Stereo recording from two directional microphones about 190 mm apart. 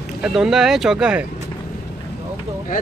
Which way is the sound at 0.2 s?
5° right (ahead or behind).